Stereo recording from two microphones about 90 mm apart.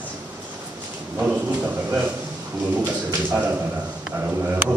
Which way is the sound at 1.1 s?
20° right (ahead or behind).